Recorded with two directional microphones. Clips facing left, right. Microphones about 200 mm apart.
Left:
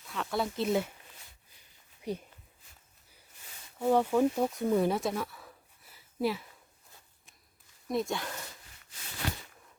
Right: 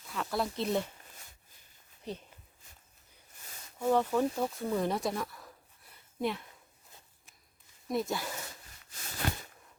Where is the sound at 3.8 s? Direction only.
10° left (ahead or behind).